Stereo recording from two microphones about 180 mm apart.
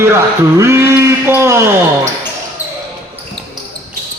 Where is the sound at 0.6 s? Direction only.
15° right (ahead or behind).